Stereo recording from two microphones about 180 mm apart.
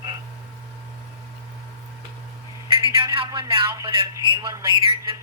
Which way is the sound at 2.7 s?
30° right (ahead or behind).